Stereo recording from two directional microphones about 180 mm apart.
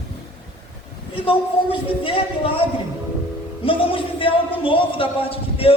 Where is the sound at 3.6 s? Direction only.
30° left (ahead or behind).